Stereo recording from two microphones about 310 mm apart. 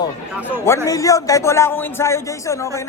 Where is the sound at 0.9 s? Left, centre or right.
Centre.